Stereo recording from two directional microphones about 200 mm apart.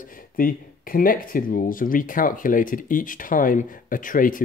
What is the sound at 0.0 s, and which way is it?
Speech, 45° left (ahead or behind).